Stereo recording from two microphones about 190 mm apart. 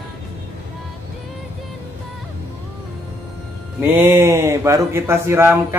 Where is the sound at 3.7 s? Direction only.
10° right (ahead or behind).